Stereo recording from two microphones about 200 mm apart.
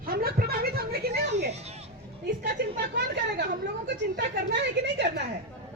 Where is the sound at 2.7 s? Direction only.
55° right (ahead or behind).